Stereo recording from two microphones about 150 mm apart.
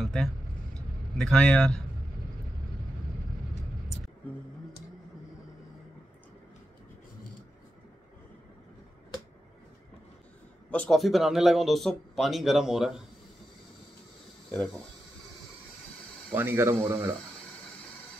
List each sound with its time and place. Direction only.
0.0 s vehicle: centre (ahead or behind)
0.7 s a man's voice: 5° left (ahead or behind)
10.7 s speech: 5° left (ahead or behind)
14.5 s speech: 5° left (ahead or behind)
16.3 s speech: 15° right (ahead or behind)